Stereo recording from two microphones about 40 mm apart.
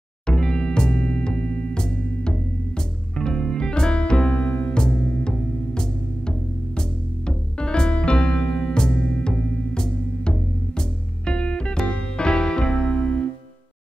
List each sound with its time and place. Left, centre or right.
0.3 s music: centre
7.2 s music: left